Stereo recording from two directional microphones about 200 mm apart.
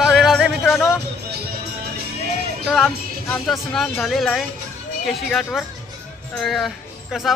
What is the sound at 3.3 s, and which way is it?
Speech, centre (ahead or behind).